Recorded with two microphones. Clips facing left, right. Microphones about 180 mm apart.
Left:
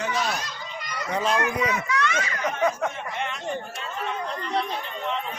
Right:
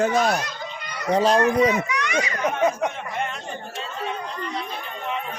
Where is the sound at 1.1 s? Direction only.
35° right (ahead or behind).